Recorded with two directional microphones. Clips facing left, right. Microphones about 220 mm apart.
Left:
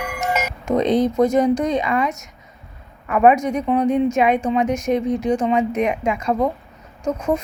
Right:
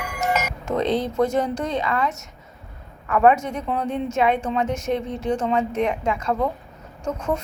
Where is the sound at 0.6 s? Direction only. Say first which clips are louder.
Left 6 dB; 15° left (ahead or behind).